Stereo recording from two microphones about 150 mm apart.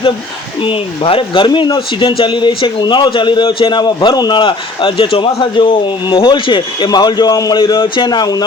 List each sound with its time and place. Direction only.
0.6 s speech: 35° left (ahead or behind)